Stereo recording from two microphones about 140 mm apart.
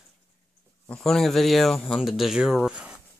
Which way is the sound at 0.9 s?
5° left (ahead or behind).